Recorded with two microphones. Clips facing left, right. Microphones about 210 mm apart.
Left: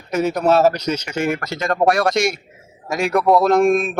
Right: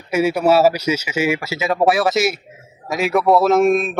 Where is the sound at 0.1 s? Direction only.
10° right (ahead or behind).